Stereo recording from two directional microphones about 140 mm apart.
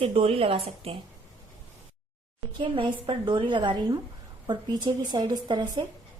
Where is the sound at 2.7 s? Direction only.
35° right (ahead or behind).